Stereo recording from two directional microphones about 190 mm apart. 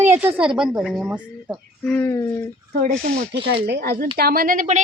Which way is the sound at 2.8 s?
45° right (ahead or behind).